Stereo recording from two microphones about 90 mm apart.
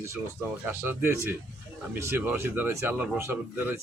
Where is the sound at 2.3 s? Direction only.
25° right (ahead or behind).